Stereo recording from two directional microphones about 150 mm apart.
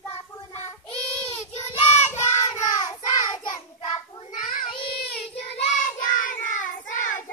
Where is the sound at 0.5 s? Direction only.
15° left (ahead or behind).